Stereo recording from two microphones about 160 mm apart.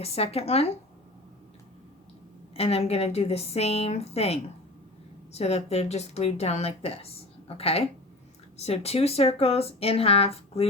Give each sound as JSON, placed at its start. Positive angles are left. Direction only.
{"t": 0.0, "sound": "speech", "side_deg": 40}
{"t": 2.6, "sound": "speech", "side_deg": 40}